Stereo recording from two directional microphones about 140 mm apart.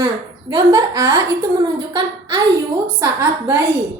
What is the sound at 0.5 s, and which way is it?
A woman's voice, 25° right (ahead or behind).